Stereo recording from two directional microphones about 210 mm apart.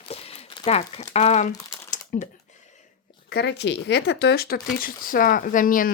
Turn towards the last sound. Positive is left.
turn(degrees=40)  # may be behind; listen again after turning